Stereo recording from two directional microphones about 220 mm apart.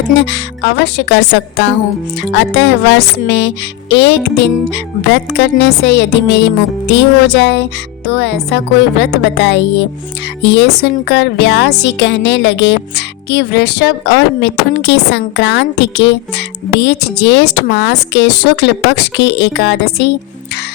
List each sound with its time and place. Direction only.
0.2 s speech: 55° left (ahead or behind)